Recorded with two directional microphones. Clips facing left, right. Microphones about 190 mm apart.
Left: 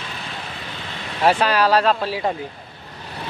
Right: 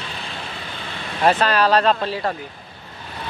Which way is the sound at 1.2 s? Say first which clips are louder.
Even; 10° left (ahead or behind).